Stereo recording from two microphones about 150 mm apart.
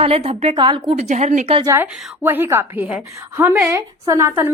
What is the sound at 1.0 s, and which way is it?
Speech, 50° right (ahead or behind).